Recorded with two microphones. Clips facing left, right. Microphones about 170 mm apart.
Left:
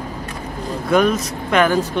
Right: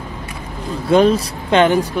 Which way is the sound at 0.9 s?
30° right (ahead or behind).